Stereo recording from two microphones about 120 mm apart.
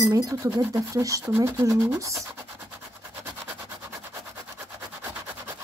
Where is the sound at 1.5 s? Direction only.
25° right (ahead or behind).